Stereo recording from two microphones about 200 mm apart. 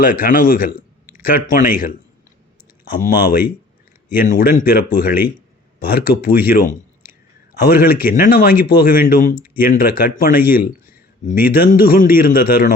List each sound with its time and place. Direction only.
0.0 s a man's voice: 45° left (ahead or behind)
2.8 s a man's voice: 50° left (ahead or behind)
6.7 s a sound: 10° right (ahead or behind)
7.6 s a man's voice: 50° left (ahead or behind)